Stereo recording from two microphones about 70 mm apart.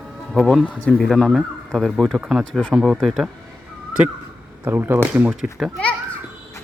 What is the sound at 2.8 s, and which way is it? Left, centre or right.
Speech, centre.